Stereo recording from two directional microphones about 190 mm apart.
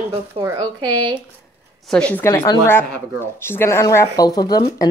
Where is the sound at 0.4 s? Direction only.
20° right (ahead or behind).